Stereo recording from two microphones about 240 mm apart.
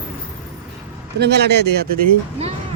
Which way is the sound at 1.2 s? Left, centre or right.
Right.